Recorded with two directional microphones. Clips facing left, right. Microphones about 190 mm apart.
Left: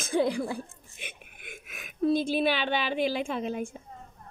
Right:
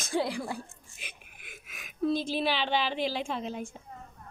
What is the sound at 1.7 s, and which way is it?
A woman's voice, 55° left (ahead or behind).